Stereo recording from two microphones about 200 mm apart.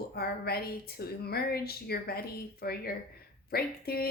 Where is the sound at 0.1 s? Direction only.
50° left (ahead or behind).